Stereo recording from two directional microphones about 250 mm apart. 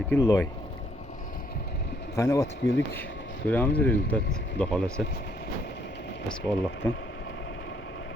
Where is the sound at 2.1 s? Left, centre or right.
Centre.